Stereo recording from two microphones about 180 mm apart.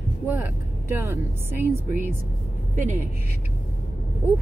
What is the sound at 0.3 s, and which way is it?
Speech, 10° right (ahead or behind).